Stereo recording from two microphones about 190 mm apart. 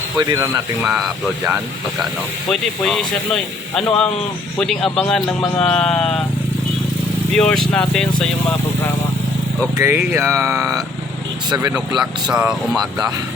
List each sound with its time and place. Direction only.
0.2 s speech: 20° right (ahead or behind)
0.8 s a man's voice: 5° right (ahead or behind)
2.5 s a man's voice: centre (ahead or behind)
7.3 s a man's voice: 5° left (ahead or behind)
9.7 s speech: 15° right (ahead or behind)
11.9 s a man's voice: 5° right (ahead or behind)